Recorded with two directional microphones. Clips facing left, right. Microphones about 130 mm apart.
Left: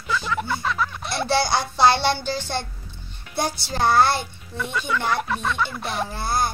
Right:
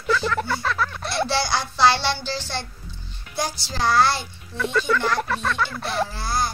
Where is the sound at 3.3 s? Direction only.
55° left (ahead or behind).